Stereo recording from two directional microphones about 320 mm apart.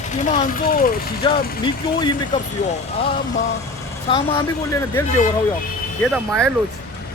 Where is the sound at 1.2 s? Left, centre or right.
Centre.